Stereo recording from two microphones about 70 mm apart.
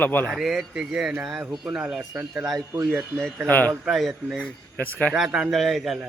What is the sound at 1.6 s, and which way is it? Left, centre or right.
Speech, centre.